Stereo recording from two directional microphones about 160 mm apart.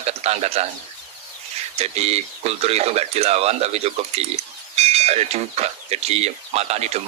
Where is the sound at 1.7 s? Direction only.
40° right (ahead or behind).